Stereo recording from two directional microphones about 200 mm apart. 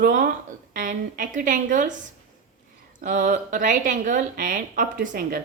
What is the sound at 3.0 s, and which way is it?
Speech, 45° right (ahead or behind).